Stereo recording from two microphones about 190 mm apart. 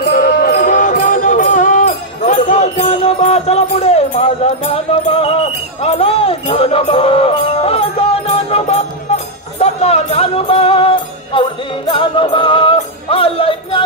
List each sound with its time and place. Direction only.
0.0 s music: 55° left (ahead or behind); by 13.8 s 30° left (ahead or behind)